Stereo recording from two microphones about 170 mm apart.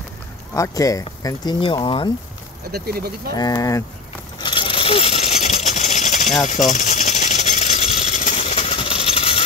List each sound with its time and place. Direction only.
0.6 s speech: 20° left (ahead or behind)
2.7 s speech: 65° right (ahead or behind)
3.3 s speech: 25° left (ahead or behind)
4.4 s coin: 30° left (ahead or behind); by 6.3 s 45° left (ahead or behind)
6.4 s engine: 45° left (ahead or behind)